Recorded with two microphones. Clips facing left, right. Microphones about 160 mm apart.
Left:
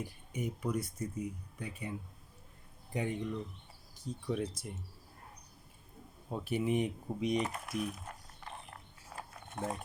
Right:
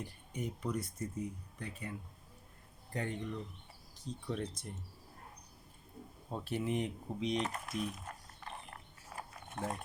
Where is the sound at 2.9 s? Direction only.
15° left (ahead or behind).